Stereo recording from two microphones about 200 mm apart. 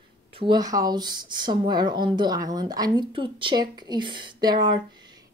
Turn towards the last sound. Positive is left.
turn(degrees=-20)  # may be behind; listen again after turning